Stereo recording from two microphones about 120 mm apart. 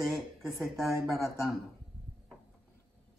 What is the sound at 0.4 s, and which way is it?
Speech, centre (ahead or behind).